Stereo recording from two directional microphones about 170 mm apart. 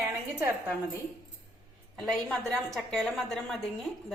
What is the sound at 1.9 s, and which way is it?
A woman's voice, 5° left (ahead or behind).